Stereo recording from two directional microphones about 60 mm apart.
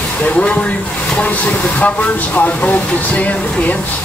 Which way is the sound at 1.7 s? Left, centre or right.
Left.